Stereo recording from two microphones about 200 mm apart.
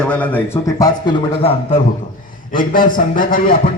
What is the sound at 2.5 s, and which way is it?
A man's voice, 45° left (ahead or behind).